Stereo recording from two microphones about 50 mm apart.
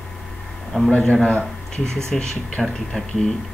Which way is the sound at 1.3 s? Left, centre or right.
Left.